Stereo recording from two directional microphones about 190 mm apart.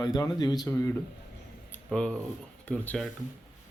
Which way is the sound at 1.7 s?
5° left (ahead or behind).